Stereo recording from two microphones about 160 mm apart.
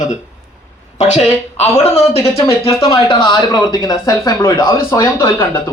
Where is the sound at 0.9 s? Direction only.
45° left (ahead or behind); by 5.6 s 15° left (ahead or behind).